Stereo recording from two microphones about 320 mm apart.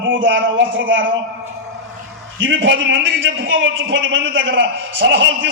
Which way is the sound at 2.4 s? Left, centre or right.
Right.